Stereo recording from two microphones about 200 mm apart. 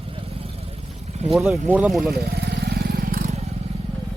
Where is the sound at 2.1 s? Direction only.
55° right (ahead or behind).